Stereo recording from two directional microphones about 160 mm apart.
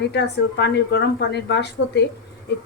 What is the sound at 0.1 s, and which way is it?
A woman's voice, 90° left.